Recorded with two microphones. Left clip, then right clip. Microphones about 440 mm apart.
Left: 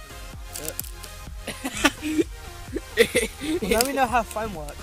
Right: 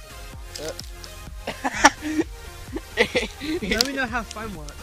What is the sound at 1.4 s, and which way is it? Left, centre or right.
Music, centre.